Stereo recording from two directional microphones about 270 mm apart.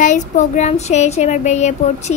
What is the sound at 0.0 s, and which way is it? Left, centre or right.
Speech, left.